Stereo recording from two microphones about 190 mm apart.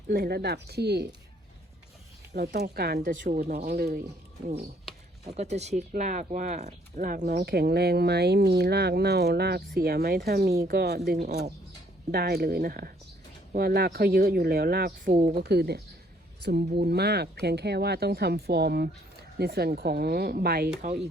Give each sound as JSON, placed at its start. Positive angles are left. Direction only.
{"t": 0.1, "sound": "speech", "side_deg": -55}
{"t": 2.3, "sound": "speech", "side_deg": -55}
{"t": 4.4, "sound": "speech", "side_deg": -35}